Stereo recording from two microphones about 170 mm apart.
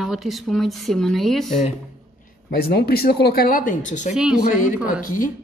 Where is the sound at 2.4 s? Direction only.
70° left (ahead or behind); by 4.1 s 45° left (ahead or behind).